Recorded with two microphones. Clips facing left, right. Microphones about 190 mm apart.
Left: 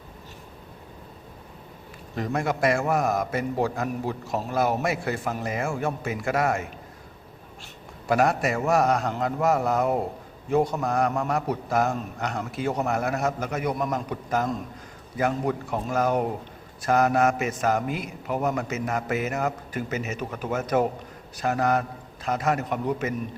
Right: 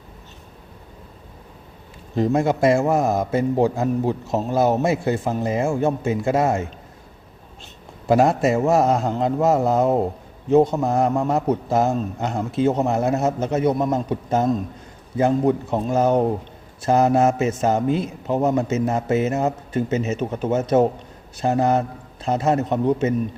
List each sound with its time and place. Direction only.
2.1 s a man's voice: 25° right (ahead or behind)
8.0 s a man's voice: 25° right (ahead or behind)